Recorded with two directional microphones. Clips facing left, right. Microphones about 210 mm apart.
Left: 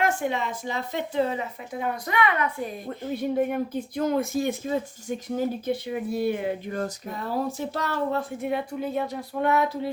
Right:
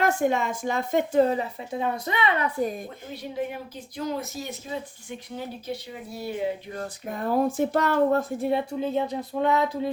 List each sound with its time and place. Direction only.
0.2 s speech: 45° right (ahead or behind)
1.7 s speech: 25° right (ahead or behind)
3.1 s speech: 55° left (ahead or behind)
5.6 s speech: 55° left (ahead or behind)
7.1 s speech: 50° right (ahead or behind)
8.4 s speech: 30° right (ahead or behind)